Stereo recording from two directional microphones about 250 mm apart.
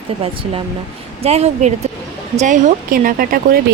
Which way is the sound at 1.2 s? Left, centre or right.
Right.